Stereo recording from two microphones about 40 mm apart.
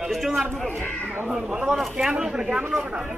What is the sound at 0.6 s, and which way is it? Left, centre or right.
Speech, left.